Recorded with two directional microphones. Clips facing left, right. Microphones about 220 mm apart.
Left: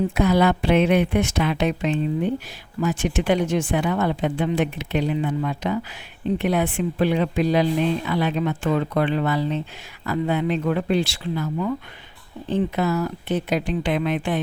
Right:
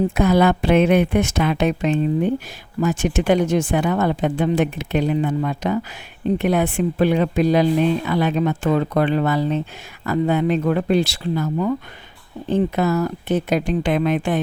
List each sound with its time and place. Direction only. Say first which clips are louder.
0.1 s speech: right 2 dB; 45° right (ahead or behind)